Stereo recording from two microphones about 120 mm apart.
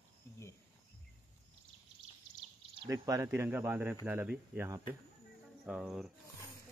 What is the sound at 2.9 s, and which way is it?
Speech, 25° right (ahead or behind).